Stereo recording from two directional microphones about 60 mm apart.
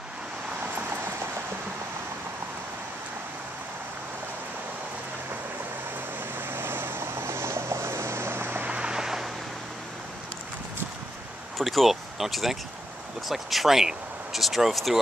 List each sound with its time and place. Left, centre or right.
0.7 s vehicle: right
6.3 s vehicle: right
8.6 s vehicle: centre
11.5 s speech: centre